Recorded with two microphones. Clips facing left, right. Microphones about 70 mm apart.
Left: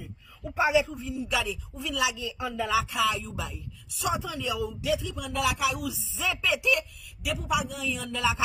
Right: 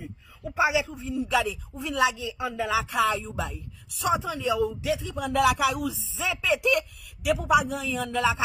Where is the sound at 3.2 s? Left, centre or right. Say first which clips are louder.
Right 4 dB; right.